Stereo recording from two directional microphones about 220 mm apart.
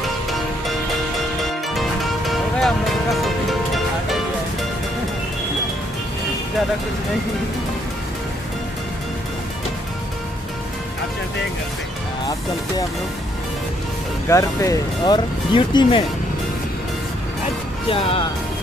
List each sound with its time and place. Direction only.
1.7 s music: centre (ahead or behind)
14.3 s speech: 15° left (ahead or behind)
17.8 s speech: 25° left (ahead or behind)